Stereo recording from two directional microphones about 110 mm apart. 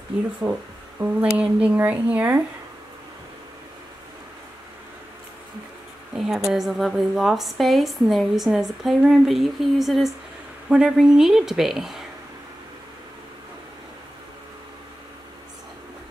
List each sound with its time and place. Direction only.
0.4 s speech: 15° right (ahead or behind)
6.1 s a woman's voice: 5° right (ahead or behind)